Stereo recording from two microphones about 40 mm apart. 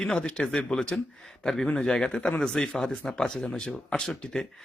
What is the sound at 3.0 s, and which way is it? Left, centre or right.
Speech, centre.